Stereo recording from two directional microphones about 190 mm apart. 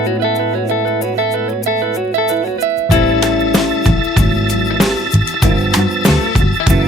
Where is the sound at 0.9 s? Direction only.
Centre (ahead or behind).